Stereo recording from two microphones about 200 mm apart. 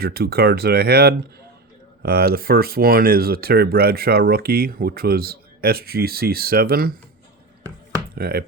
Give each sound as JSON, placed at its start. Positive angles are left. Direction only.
{"t": 0.0, "sound": "speech", "side_deg": -50}
{"t": 8.1, "sound": "speech", "side_deg": -50}